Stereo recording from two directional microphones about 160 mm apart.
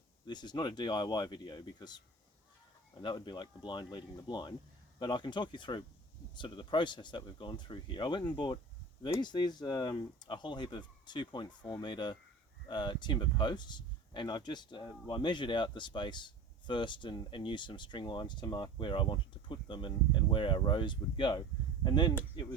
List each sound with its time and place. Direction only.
0.3 s speech: 25° left (ahead or behind)